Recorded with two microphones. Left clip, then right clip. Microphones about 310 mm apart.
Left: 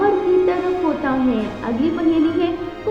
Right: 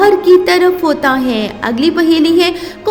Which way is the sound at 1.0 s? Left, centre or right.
Right.